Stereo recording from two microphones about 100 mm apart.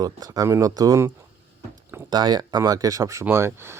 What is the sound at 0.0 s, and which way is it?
Speech, 40° right (ahead or behind).